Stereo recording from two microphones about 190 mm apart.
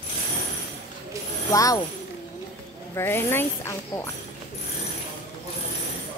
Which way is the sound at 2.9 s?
10° left (ahead or behind).